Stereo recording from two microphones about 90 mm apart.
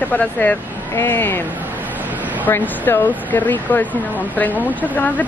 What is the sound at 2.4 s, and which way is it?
Speech, 20° left (ahead or behind).